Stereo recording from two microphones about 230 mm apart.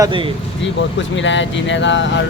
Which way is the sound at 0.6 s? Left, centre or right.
Left.